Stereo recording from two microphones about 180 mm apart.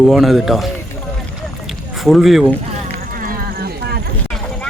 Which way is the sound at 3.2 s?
55° right (ahead or behind).